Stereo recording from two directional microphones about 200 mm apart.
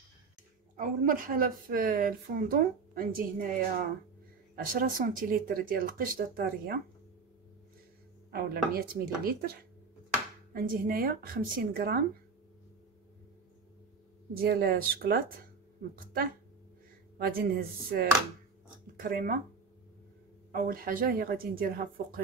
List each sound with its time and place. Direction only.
0.7 s a woman's voice: 45° right (ahead or behind)
4.6 s a woman's voice: 45° right (ahead or behind)
8.7 s a woman's voice: 50° right (ahead or behind)
14.3 s a woman's voice: 50° right (ahead or behind)
20.5 s a woman's voice: 50° right (ahead or behind)